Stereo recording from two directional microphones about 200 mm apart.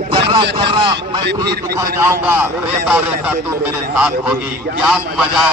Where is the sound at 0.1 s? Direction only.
25° right (ahead or behind).